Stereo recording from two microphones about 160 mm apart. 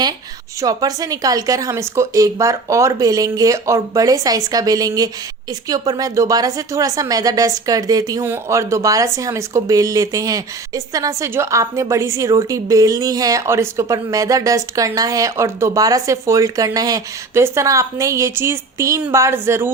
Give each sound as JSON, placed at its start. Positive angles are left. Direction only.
{"t": 0.6, "sound": "a woman's voice", "side_deg": -25}